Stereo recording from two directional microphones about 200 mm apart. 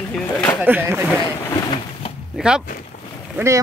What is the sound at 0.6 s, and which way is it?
Speech, 10° right (ahead or behind).